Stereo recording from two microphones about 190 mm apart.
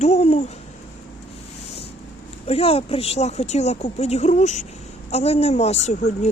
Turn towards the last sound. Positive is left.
turn(degrees=40)  # may be behind; listen again after turning